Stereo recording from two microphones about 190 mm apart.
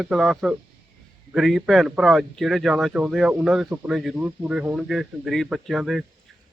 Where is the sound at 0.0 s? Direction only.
Centre (ahead or behind).